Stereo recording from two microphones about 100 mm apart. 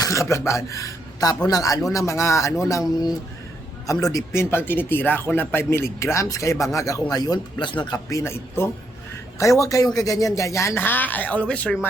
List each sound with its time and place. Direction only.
0.0 s a man's voice: 30° left (ahead or behind)
8.1 s speech: 25° left (ahead or behind)
10.8 s speech: 20° left (ahead or behind)